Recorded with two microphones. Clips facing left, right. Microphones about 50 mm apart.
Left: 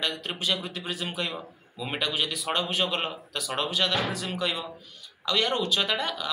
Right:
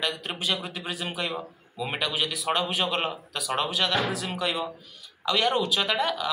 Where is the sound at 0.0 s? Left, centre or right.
Centre.